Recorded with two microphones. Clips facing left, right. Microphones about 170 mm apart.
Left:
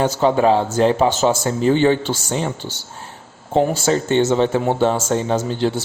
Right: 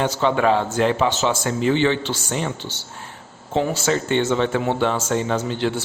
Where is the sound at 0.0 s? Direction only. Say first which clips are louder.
Left 3 dB; 40° left (ahead or behind).